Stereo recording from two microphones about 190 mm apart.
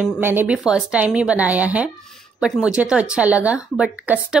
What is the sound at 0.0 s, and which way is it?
A woman's voice, 10° right (ahead or behind).